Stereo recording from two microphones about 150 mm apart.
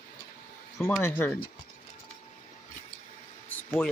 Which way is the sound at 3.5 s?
10° left (ahead or behind).